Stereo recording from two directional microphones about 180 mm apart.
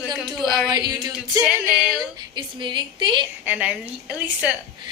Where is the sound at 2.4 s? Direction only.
25° right (ahead or behind).